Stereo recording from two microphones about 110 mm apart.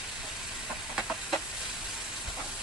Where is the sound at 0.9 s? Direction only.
5° right (ahead or behind).